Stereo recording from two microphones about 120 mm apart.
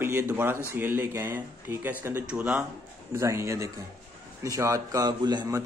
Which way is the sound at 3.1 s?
25° right (ahead or behind).